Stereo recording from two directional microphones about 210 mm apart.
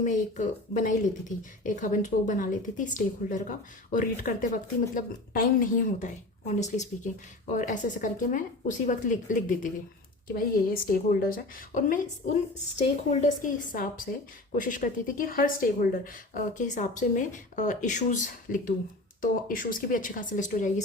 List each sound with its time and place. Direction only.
0.0 s a woman's voice: 35° left (ahead or behind)